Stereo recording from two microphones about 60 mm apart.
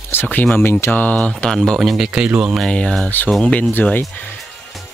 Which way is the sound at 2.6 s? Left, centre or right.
Centre.